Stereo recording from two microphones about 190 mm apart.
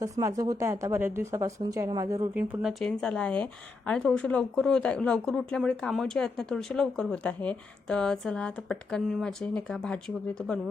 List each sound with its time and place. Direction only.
0.0 s speech: 15° right (ahead or behind)
2.6 s a woman's voice: centre (ahead or behind)